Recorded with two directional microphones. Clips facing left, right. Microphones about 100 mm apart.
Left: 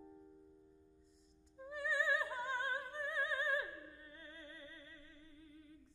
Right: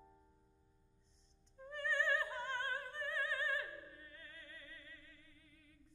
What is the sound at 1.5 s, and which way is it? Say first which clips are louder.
Opera: even; 10° left (ahead or behind).